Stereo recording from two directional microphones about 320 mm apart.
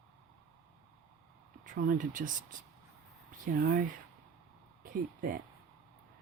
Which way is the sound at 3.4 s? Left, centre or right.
Right.